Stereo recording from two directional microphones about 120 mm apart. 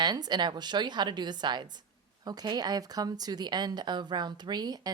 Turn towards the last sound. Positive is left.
turn(degrees=-35)  # may be behind; listen again after turning